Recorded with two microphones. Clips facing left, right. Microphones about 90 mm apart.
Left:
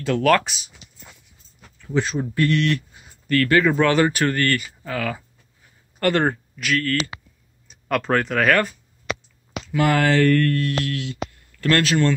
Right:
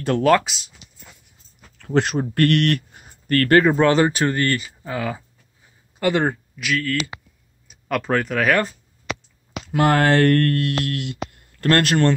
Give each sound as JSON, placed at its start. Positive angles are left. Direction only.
{"t": 0.4, "sound": "speech", "side_deg": 0}
{"t": 1.8, "sound": "speech", "side_deg": -60}
{"t": 3.6, "sound": "speech", "side_deg": -30}
{"t": 5.9, "sound": "speech", "side_deg": -10}
{"t": 9.7, "sound": "speech", "side_deg": -50}